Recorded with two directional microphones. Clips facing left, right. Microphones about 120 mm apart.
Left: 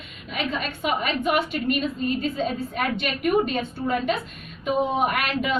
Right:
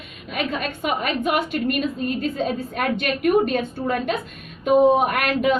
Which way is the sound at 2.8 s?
50° right (ahead or behind).